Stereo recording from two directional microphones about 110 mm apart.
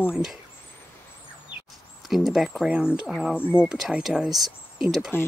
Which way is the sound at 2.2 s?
Centre (ahead or behind).